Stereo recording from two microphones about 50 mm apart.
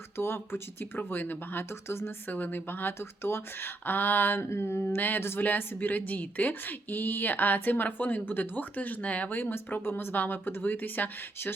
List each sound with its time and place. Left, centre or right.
0.2 s speech: left
2.3 s speech: left
9.4 s speech: left